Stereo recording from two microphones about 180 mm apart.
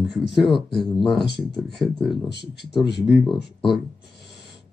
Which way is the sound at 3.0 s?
5° right (ahead or behind).